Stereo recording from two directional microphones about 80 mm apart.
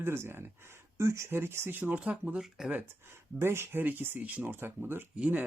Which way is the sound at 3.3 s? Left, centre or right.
Right.